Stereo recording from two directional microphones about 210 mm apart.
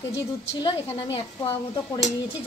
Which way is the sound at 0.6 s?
25° left (ahead or behind).